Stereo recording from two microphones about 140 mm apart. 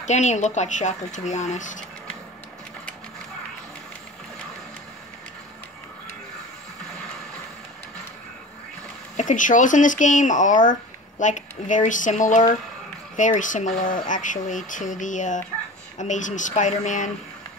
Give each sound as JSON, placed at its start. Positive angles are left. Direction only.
{"t": 0.0, "sound": "speech", "side_deg": 55}
{"t": 9.1, "sound": "speech", "side_deg": 65}